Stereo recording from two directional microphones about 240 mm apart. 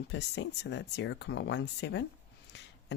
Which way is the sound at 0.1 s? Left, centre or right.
Left.